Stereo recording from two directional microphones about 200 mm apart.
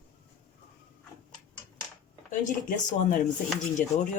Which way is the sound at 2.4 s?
45° left (ahead or behind).